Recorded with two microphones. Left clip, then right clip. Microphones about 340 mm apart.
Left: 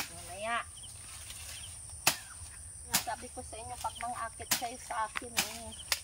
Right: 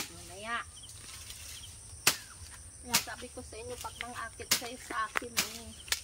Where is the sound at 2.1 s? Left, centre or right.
Centre.